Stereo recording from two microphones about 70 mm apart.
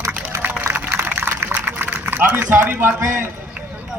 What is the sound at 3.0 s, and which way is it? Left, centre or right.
Speech, right.